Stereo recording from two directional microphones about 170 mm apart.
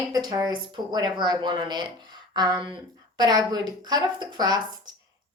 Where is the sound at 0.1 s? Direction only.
25° right (ahead or behind).